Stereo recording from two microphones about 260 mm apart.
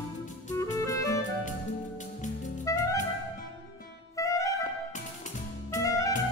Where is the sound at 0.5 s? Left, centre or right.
Centre.